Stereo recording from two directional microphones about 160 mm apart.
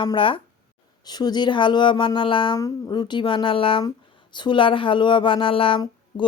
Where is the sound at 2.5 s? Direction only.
20° left (ahead or behind).